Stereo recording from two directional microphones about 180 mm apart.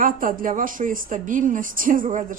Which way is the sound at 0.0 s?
50° right (ahead or behind).